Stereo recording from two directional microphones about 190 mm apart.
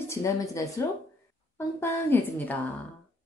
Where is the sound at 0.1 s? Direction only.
15° left (ahead or behind).